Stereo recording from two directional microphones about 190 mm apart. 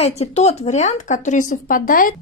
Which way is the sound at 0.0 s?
35° left (ahead or behind).